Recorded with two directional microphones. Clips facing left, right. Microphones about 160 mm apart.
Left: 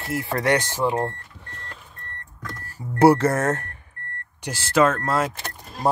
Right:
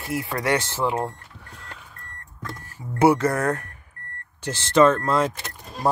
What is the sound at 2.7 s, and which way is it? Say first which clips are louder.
Speech: left 3 dB; 30° left (ahead or behind).